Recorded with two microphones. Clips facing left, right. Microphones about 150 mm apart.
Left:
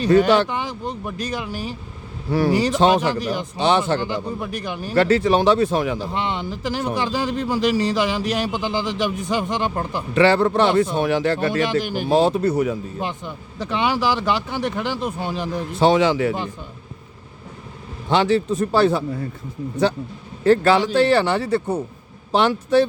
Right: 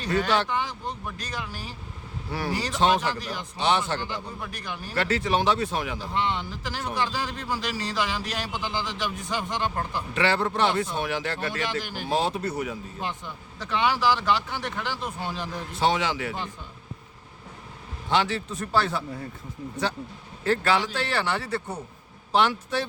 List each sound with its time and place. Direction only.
0.2 s a man's voice: 15° left (ahead or behind)
3.6 s speech: 30° left (ahead or behind)
4.0 s a man's voice: 15° left (ahead or behind)
4.9 s speech: 30° left (ahead or behind)
6.0 s a man's voice: 20° left (ahead or behind)
10.2 s speech: 35° left (ahead or behind)
11.6 s a man's voice: 15° left (ahead or behind)
12.1 s speech: 35° left (ahead or behind)
13.0 s a man's voice: 15° left (ahead or behind)
15.8 s speech: 30° left (ahead or behind)
18.1 s speech: 25° left (ahead or behind)
20.4 s speech: 30° left (ahead or behind)